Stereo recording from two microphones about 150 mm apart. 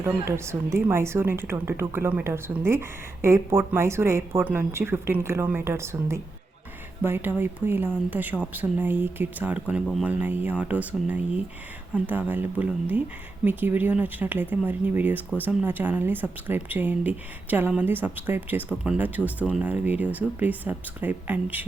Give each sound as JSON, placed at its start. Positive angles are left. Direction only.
{"t": 0.0, "sound": "a woman's voice", "side_deg": -20}